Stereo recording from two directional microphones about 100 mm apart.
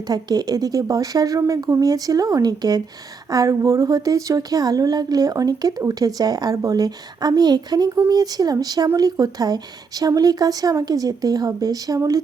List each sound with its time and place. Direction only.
0.1 s speech: 40° right (ahead or behind)